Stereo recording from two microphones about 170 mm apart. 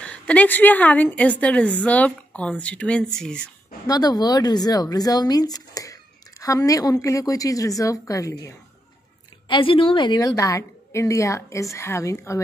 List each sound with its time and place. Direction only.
0.0 s a woman's voice: 5° left (ahead or behind)
3.8 s a woman's voice: 20° left (ahead or behind)
9.5 s a woman's voice: 30° left (ahead or behind)